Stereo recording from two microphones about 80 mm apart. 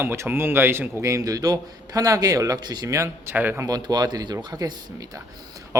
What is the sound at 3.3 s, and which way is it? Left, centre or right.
Speech, right.